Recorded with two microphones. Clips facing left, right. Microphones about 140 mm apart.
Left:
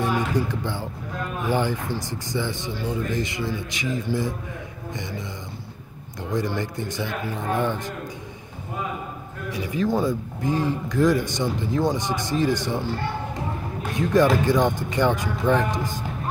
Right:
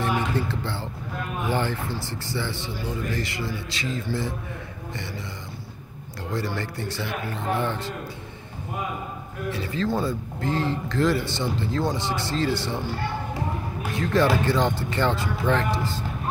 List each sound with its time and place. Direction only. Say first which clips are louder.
0.0 s speech: left 2 dB; 15° left (ahead or behind)
6.3 s speech: left 3 dB; 15° left (ahead or behind)
9.5 s speech: left 2 dB; 15° left (ahead or behind)
13.9 s speech: left 3 dB; 15° left (ahead or behind)